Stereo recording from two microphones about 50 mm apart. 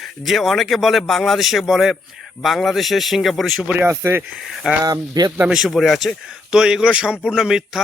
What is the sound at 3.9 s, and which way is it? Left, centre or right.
Speech, right.